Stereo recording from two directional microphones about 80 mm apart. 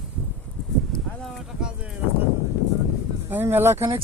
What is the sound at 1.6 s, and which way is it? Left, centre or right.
Speech, centre.